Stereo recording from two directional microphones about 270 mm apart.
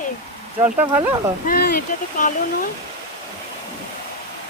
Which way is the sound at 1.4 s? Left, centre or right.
Left.